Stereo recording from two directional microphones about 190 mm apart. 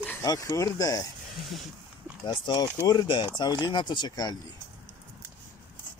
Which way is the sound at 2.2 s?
25° left (ahead or behind).